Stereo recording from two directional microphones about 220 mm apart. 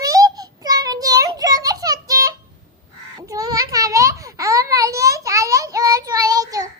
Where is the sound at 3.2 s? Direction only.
15° right (ahead or behind).